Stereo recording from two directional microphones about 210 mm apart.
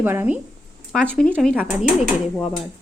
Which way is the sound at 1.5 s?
5° right (ahead or behind).